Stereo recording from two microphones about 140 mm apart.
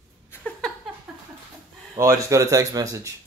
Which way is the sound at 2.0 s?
25° right (ahead or behind).